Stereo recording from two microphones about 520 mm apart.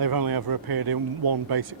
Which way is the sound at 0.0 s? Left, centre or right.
Right.